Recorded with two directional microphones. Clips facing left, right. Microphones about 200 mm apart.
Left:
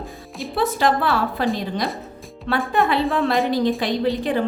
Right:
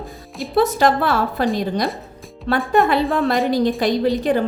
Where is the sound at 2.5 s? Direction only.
40° right (ahead or behind).